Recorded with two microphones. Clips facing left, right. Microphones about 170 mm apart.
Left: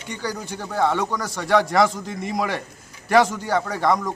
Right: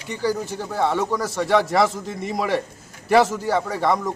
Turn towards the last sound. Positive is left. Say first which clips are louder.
# even
turn(degrees=0)  # may be behind; listen again after turning